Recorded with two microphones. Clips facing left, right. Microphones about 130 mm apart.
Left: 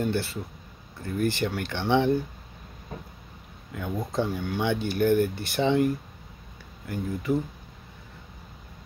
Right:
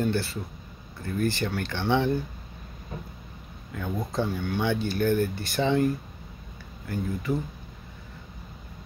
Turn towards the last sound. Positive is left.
turn(degrees=15)  # may be behind; listen again after turning